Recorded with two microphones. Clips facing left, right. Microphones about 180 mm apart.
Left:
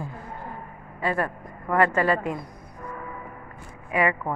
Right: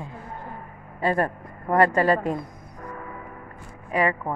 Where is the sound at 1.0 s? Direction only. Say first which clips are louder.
Right 3 dB; 40° right (ahead or behind).